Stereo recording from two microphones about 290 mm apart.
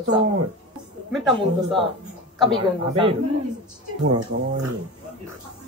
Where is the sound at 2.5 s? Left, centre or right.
Centre.